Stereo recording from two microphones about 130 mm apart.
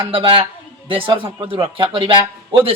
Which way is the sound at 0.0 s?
45° right (ahead or behind).